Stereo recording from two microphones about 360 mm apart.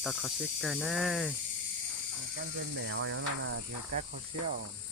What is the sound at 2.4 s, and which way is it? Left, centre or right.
Speech, right.